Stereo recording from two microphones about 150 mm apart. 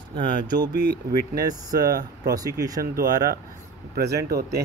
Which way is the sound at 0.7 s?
85° right.